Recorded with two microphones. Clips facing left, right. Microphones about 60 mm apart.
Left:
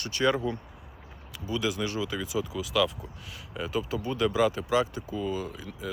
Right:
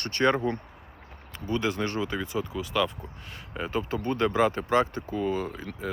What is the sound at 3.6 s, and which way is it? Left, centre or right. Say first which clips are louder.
Speech: right 1 dB; right.